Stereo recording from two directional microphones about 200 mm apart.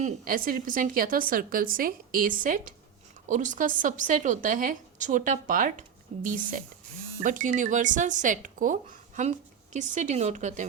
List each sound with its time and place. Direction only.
0.0 s a woman's voice: 45° right (ahead or behind)